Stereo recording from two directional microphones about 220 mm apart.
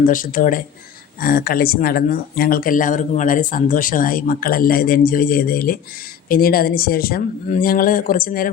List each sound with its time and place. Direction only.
0.0 s speech: 40° left (ahead or behind)